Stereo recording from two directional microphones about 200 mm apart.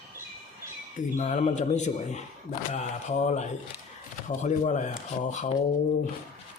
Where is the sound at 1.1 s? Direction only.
40° left (ahead or behind).